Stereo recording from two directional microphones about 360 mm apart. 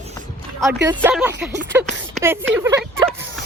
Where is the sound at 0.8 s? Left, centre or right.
Centre.